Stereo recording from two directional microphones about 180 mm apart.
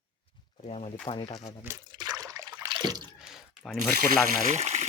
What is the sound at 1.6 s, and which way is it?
Trickle, 20° right (ahead or behind).